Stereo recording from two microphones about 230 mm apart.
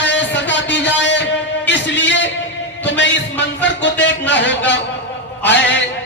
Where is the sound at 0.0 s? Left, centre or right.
Left.